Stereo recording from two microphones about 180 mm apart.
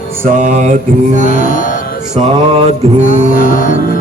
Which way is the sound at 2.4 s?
30° right (ahead or behind).